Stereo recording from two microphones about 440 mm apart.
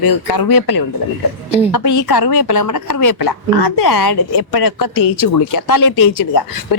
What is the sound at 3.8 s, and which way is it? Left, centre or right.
A woman's voice, left.